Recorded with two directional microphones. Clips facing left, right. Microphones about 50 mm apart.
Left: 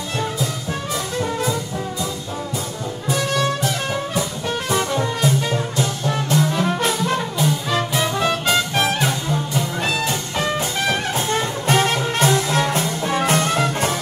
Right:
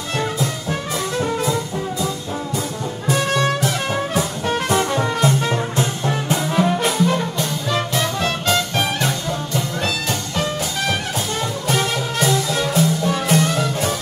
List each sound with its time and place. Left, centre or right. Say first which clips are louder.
6.0 s brass instrument: left 1 dB; right
6.6 s music: right 3 dB; centre
11.2 s music: left 2 dB; left